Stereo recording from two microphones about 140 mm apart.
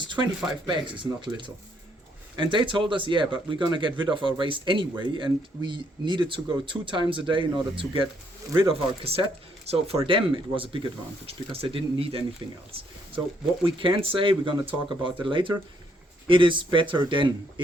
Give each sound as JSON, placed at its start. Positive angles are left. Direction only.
{"t": 0.0, "sound": "a sound", "side_deg": -35}
{"t": 0.7, "sound": "speech", "side_deg": -35}
{"t": 13.7, "sound": "speech", "side_deg": -35}